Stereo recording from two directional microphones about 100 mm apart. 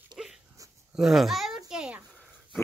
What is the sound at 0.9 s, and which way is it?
Babbling, 5° right (ahead or behind).